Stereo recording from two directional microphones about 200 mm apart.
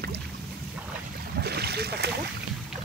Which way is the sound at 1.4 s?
55° right (ahead or behind).